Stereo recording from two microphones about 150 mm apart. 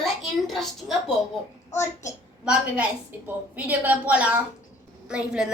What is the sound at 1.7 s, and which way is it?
Speech, 20° left (ahead or behind).